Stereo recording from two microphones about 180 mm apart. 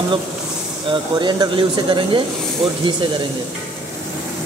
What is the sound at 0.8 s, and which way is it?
Speech, 25° right (ahead or behind).